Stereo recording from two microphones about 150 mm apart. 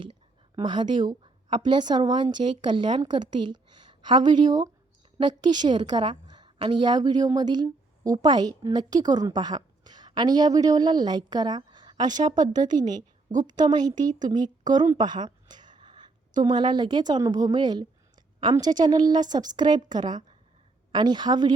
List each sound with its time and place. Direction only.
0.5 s a woman's voice: 30° right (ahead or behind)
14.9 s a sound: 30° right (ahead or behind)
16.4 s a woman's voice: 30° right (ahead or behind)